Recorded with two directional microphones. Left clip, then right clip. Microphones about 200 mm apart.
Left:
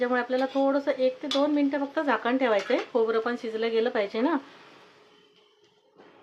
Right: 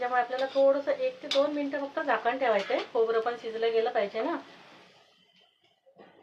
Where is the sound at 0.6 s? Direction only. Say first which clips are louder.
Left 1 dB; 50° left (ahead or behind).